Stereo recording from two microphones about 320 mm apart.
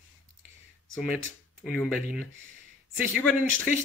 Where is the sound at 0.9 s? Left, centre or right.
Centre.